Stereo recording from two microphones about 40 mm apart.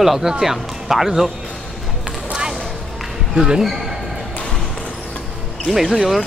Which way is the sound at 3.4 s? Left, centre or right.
Centre.